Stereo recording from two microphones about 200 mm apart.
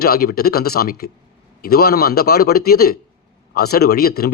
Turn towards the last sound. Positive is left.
turn(degrees=50)  # may be behind; listen again after turning